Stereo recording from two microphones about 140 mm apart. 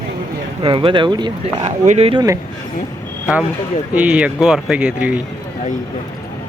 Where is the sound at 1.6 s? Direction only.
55° right (ahead or behind).